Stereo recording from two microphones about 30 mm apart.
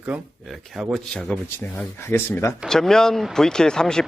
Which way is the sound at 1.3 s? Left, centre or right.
Left.